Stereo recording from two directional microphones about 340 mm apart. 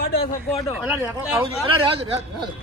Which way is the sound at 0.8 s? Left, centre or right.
Centre.